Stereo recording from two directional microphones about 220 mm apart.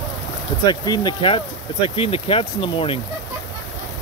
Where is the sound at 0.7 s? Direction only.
20° left (ahead or behind).